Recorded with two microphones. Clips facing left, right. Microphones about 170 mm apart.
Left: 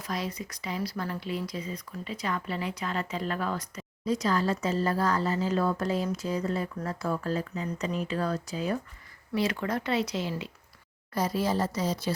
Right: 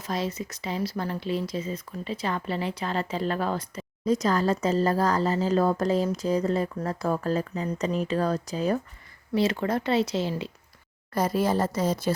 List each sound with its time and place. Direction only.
0.0 s speech: 25° right (ahead or behind)
4.0 s speech: 45° right (ahead or behind)
9.3 s speech: 25° right (ahead or behind)
11.1 s speech: 50° right (ahead or behind)